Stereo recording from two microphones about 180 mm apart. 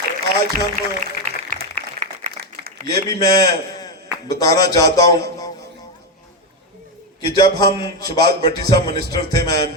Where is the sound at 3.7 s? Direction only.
20° left (ahead or behind).